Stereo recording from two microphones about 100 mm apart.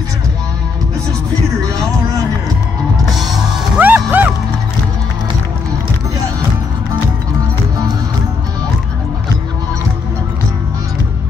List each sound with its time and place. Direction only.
3.2 s music: centre (ahead or behind)
3.8 s music: 15° right (ahead or behind)